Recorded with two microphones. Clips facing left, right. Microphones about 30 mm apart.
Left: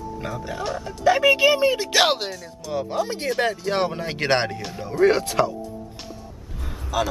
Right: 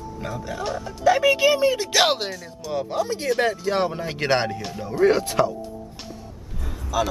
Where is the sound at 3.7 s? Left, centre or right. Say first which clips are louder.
Even; left.